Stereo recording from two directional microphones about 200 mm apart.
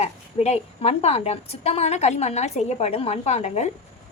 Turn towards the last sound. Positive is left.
turn(degrees=30)  # may be behind; listen again after turning